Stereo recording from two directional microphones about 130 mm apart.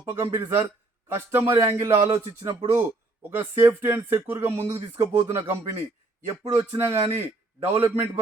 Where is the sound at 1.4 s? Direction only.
20° right (ahead or behind).